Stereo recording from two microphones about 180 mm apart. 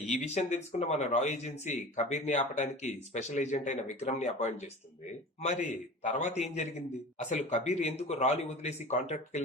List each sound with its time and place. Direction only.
0.1 s speech: 40° left (ahead or behind)